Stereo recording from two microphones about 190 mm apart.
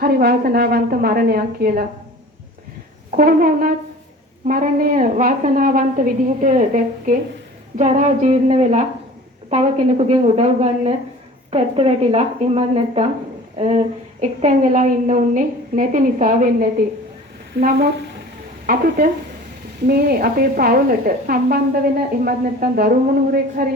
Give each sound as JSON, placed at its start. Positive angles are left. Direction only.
{"t": 0.0, "sound": "a woman's voice", "side_deg": -55}
{"t": 3.2, "sound": "a woman's voice", "side_deg": -50}
{"t": 18.6, "sound": "a woman's voice", "side_deg": -50}